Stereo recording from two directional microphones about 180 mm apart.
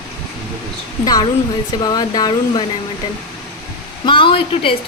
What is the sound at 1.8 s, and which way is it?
Speech, 20° left (ahead or behind).